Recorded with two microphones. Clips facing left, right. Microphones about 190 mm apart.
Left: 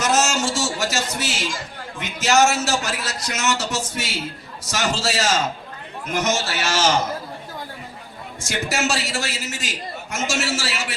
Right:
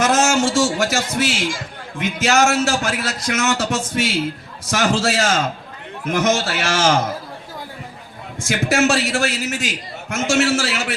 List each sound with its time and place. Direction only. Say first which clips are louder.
0.0 s a man's voice: right 4 dB; 55° right (ahead or behind)
8.4 s a man's voice: right 7 dB; 55° right (ahead or behind)